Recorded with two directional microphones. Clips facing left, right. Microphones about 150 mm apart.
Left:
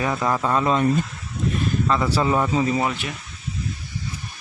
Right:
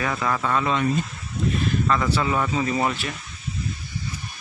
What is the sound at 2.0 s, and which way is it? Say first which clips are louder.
Speech: left 3 dB; 35° left (ahead or behind).